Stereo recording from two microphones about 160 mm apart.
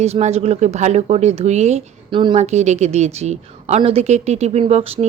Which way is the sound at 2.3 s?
45° right (ahead or behind).